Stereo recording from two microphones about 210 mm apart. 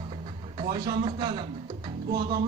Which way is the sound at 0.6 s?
20° right (ahead or behind).